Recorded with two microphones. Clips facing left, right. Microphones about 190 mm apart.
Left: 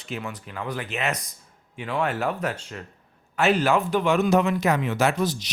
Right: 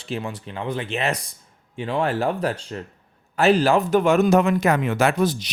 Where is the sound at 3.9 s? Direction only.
45° right (ahead or behind).